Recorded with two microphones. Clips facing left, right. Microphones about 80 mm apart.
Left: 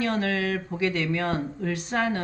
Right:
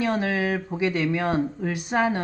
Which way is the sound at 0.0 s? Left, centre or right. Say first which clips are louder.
Right 2 dB; centre.